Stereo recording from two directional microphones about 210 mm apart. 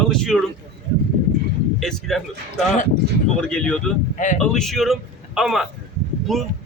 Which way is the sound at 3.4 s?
5° left (ahead or behind).